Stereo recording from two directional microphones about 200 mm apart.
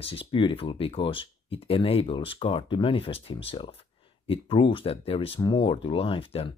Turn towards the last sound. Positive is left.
turn(degrees=30)  # may be behind; listen again after turning